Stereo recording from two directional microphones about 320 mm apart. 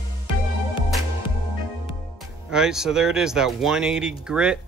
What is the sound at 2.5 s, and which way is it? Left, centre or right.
Speech, centre.